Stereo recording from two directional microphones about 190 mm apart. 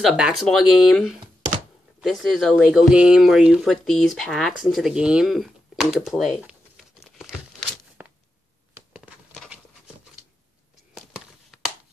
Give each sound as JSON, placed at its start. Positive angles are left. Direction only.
{"t": 0.0, "sound": "speech", "side_deg": 0}
{"t": 6.4, "sound": "tearing", "side_deg": 0}
{"t": 11.0, "sound": "a sound", "side_deg": 0}